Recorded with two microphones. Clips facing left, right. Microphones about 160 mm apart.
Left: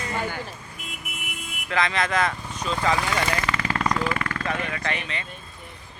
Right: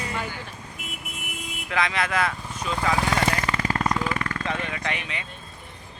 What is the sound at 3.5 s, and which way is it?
Jackhammer, 40° right (ahead or behind).